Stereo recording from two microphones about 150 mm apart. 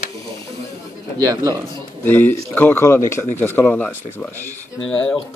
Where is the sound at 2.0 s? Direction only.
10° left (ahead or behind).